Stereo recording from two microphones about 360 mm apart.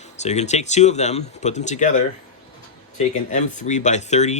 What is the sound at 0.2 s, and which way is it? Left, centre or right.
Speech, centre.